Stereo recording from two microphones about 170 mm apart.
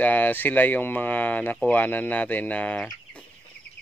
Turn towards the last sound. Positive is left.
turn(degrees=5)  # may be behind; listen again after turning